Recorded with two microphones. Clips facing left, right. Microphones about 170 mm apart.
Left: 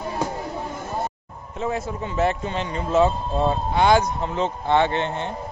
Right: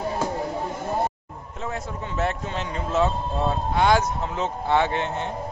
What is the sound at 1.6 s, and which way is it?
A man's voice, 5° left (ahead or behind).